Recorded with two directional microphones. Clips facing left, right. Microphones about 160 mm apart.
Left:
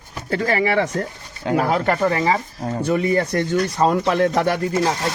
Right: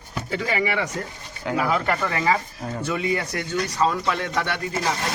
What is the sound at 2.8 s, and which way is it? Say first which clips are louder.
Speech: left 6 dB; 45° left (ahead or behind).